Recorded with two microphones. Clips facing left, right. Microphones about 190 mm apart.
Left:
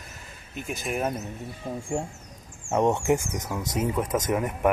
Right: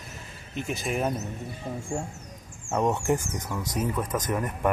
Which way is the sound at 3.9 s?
25° left (ahead or behind).